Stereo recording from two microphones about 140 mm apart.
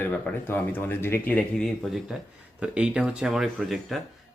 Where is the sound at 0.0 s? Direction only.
15° left (ahead or behind).